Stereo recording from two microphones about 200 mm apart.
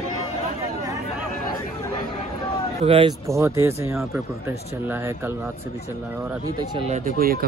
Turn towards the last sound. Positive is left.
turn(degrees=-45)  # may be behind; listen again after turning